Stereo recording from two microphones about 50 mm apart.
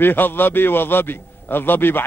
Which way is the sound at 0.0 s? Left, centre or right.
Left.